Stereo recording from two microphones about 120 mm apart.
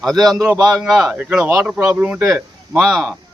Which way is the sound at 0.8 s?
5° right (ahead or behind).